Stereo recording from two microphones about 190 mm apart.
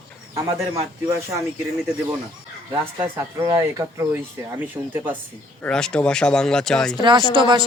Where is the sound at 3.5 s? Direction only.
15° right (ahead or behind).